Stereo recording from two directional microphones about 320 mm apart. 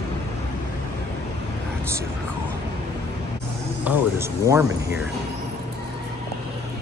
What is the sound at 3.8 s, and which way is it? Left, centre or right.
Speech, centre.